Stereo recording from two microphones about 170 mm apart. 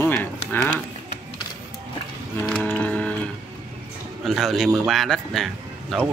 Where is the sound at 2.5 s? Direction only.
5° left (ahead or behind).